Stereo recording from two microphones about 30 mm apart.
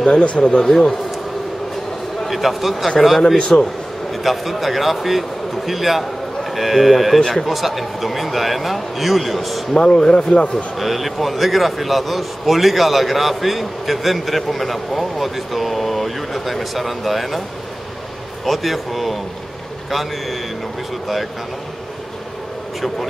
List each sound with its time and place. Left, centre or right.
0.0 s speech: left
0.6 s a man's voice: centre
2.2 s a man's voice: centre
3.3 s speech: left
4.1 s a man's voice: centre
9.8 s speech: left
10.8 s a man's voice: centre
18.4 s a man's voice: centre